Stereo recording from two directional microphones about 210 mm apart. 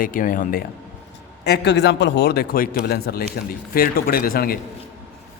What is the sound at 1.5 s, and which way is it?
A man's voice, 50° left (ahead or behind).